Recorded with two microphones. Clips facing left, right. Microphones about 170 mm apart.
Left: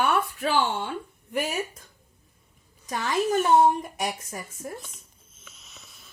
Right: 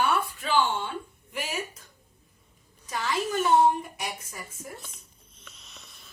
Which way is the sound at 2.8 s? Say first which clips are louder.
Left 4 dB; 45° left (ahead or behind).